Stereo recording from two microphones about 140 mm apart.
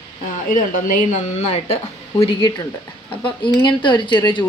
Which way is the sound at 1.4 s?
50° left (ahead or behind).